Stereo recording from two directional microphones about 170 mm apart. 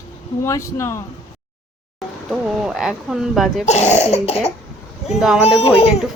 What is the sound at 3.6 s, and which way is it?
Speech, 40° left (ahead or behind).